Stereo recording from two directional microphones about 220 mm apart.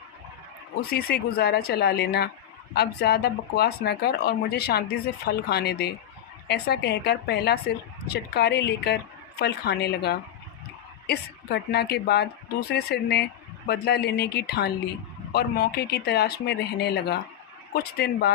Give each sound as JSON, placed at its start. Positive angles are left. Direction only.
{"t": 0.9, "sound": "a woman's voice", "side_deg": 45}